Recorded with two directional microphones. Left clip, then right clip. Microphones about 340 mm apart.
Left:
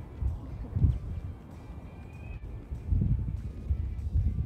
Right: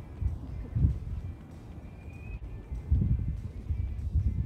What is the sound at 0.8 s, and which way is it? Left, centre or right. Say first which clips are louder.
Music: even; centre.